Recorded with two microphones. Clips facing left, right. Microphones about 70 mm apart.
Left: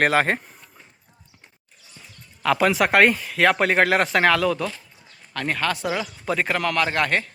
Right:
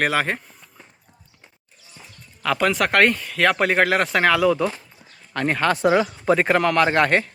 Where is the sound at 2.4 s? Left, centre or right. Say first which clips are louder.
Left 1 dB; centre.